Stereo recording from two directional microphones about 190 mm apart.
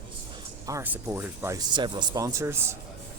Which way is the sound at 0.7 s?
10° right (ahead or behind).